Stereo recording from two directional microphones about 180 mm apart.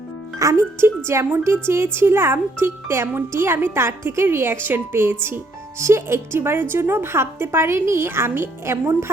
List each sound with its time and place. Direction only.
0.3 s speech: 15° right (ahead or behind)